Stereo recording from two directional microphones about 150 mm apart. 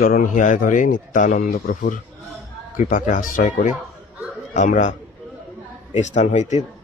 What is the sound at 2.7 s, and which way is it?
Speech, 60° left (ahead or behind).